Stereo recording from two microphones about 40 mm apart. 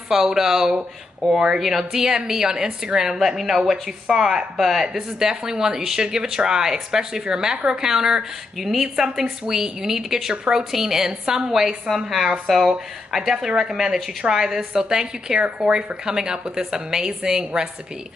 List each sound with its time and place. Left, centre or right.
0.1 s speech: centre
1.2 s speech: centre
1.6 s speech: centre